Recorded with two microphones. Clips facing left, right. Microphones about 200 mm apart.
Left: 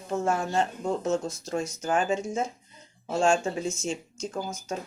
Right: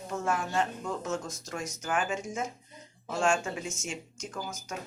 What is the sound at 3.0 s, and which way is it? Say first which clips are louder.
Speech: left 4 dB; 25° left (ahead or behind).